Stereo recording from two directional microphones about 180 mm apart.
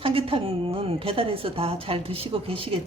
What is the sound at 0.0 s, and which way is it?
A woman's voice, 30° right (ahead or behind).